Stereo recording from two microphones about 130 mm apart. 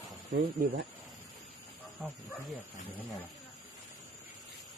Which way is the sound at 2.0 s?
5° right (ahead or behind).